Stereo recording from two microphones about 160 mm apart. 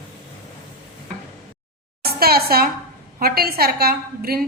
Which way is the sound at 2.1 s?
75° right (ahead or behind).